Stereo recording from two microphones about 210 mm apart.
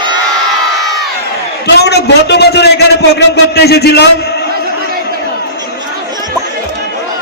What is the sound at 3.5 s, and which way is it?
Speech, 50° left (ahead or behind).